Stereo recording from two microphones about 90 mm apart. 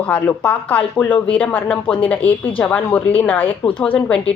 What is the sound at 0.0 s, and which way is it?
Speech, 15° left (ahead or behind).